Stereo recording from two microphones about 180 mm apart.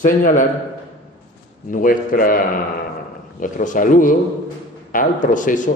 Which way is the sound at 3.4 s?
45° left (ahead or behind).